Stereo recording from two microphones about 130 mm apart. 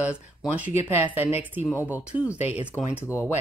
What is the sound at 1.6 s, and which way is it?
Speech, 15° left (ahead or behind).